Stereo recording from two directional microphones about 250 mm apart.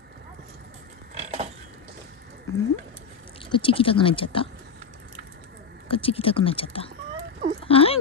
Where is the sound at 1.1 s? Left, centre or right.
Right.